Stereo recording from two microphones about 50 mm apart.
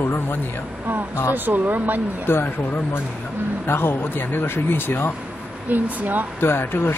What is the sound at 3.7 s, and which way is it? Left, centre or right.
Speech, left.